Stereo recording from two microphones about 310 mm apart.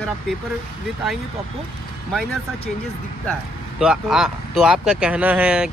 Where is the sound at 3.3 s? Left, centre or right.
Centre.